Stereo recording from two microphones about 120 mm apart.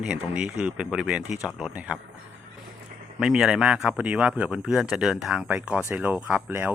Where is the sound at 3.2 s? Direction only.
5° right (ahead or behind).